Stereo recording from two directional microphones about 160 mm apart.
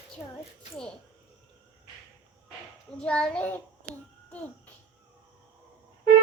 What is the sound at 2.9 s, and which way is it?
Speech, 5° left (ahead or behind).